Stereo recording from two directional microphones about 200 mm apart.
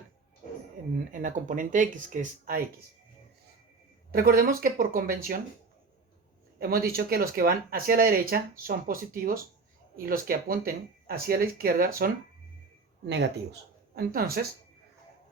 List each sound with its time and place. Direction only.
0.9 s speech: 40° right (ahead or behind)
4.1 s speech: 50° right (ahead or behind)
6.6 s speech: 50° right (ahead or behind)
13.1 s speech: 60° right (ahead or behind)